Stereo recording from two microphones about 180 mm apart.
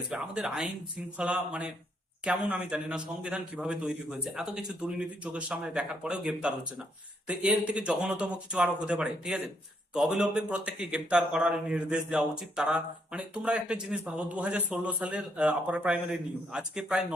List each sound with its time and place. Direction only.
0.1 s a man's voice: 5° right (ahead or behind)